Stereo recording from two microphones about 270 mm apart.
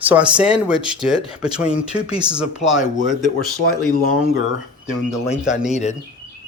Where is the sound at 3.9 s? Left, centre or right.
Left.